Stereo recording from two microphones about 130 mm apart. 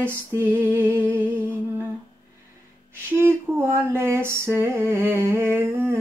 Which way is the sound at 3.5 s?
20° right (ahead or behind).